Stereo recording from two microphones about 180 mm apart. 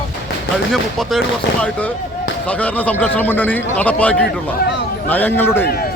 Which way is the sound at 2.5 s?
10° left (ahead or behind).